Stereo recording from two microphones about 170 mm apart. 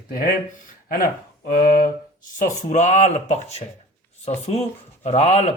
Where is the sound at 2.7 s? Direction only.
45° left (ahead or behind).